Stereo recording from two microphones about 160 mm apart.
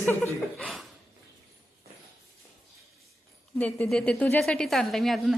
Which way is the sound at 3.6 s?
10° left (ahead or behind).